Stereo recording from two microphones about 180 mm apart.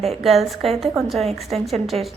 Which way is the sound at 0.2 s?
Centre (ahead or behind).